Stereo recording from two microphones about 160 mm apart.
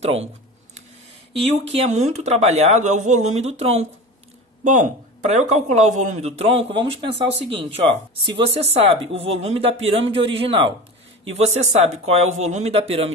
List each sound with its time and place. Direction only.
0.0 s speech: 40° right (ahead or behind)
1.4 s speech: 40° right (ahead or behind)
4.6 s speech: 50° right (ahead or behind)